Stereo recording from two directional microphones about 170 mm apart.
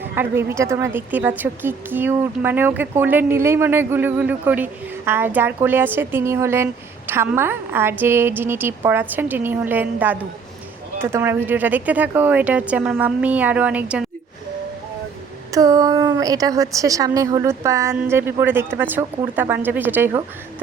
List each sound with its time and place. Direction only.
0.0 s speech: 15° right (ahead or behind)
15.5 s a woman's voice: 20° right (ahead or behind)